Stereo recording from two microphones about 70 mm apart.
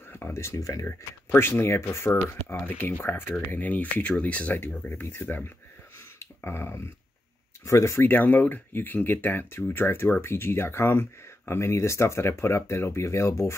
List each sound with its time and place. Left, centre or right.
0.1 s speech: left
0.8 s speech: left
6.1 s a sound: left
7.6 s speech: left
8.1 s speech: left